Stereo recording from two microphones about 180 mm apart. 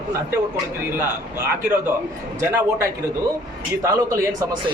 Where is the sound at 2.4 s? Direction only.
15° right (ahead or behind).